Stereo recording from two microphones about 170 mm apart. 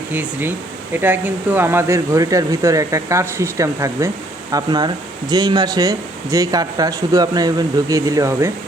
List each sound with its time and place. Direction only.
0.1 s speech: 10° right (ahead or behind)